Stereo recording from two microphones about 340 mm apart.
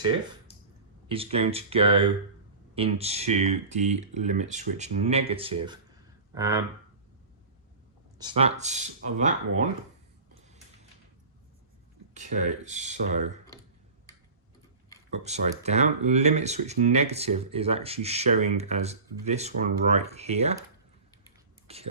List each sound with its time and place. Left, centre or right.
1.0 s speech: centre
8.2 s speech: centre
12.1 s speech: right
15.1 s speech: centre
21.7 s speech: centre